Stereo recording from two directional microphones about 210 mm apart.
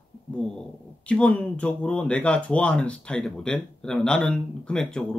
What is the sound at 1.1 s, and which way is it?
Speech, 5° left (ahead or behind).